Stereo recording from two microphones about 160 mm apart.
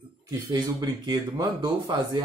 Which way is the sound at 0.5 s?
25° right (ahead or behind).